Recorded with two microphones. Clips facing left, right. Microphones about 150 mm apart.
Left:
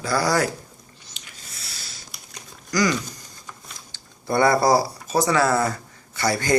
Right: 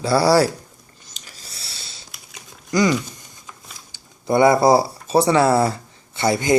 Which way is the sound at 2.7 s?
25° right (ahead or behind).